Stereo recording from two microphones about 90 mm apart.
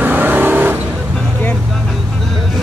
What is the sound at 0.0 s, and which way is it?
Vehicle, 20° right (ahead or behind).